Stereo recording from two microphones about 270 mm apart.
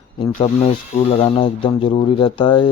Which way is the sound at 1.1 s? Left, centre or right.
Centre.